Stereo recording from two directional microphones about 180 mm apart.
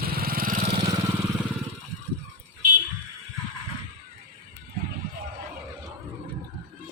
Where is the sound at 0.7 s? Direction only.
25° right (ahead or behind).